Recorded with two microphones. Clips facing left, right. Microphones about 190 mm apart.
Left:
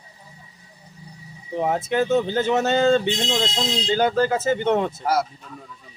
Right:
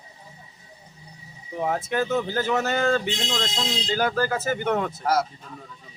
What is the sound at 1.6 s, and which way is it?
Speech, 25° left (ahead or behind).